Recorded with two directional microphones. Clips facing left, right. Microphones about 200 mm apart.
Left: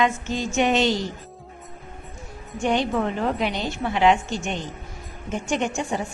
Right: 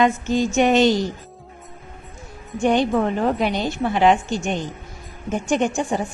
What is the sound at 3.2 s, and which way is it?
A woman's voice, 45° right (ahead or behind).